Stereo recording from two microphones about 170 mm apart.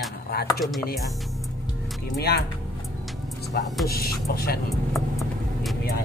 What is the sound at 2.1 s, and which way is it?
Speech, 70° left (ahead or behind).